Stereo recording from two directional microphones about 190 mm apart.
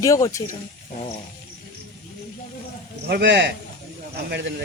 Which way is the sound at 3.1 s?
65° right (ahead or behind).